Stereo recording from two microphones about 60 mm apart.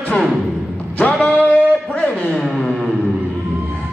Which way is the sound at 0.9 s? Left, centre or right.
Left.